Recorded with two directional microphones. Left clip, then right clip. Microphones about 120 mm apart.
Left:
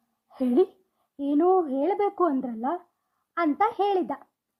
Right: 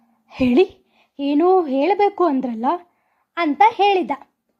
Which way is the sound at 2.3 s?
30° right (ahead or behind).